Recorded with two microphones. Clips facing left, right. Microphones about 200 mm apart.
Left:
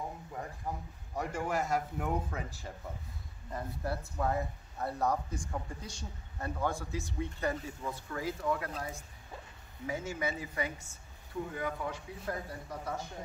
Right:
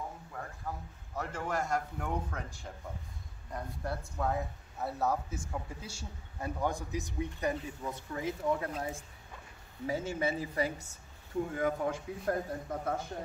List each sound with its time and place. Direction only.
0.3 s a man's voice: 20° left (ahead or behind); by 11.0 s 35° right (ahead or behind)
11.5 s a man's voice: 45° right (ahead or behind)